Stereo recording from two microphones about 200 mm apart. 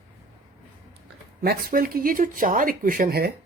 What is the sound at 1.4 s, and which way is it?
Speech, 50° right (ahead or behind).